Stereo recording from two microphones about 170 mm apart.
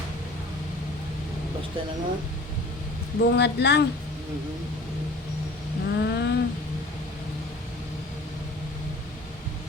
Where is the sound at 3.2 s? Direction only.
80° left.